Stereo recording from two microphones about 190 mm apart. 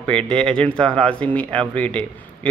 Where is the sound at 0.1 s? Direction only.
5° left (ahead or behind).